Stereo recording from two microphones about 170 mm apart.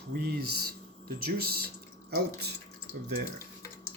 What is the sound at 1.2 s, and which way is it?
Speech, 60° right (ahead or behind).